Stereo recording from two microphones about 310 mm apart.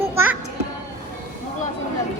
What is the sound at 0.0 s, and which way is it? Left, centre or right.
Music, centre.